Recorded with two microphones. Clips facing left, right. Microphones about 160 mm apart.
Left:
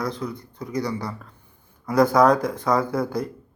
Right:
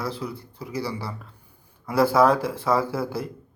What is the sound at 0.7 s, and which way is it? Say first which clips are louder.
Speech: left 3 dB; 30° right (ahead or behind).